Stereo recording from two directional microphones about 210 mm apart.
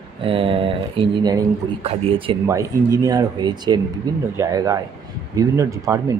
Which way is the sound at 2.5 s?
15° right (ahead or behind).